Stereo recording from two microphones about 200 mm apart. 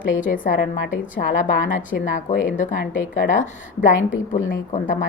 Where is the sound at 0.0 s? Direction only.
40° left (ahead or behind).